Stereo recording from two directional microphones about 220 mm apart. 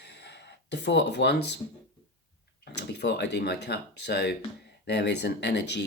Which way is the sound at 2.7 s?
50° left (ahead or behind).